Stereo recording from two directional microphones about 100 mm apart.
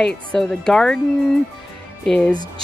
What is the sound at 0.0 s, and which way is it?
Speech, 10° left (ahead or behind).